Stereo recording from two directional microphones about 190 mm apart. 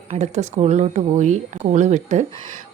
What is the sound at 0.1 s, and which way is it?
A woman's voice, 35° right (ahead or behind).